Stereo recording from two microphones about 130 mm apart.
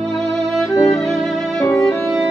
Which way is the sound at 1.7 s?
20° left (ahead or behind).